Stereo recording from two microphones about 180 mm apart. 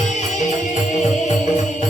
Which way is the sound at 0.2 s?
40° left (ahead or behind).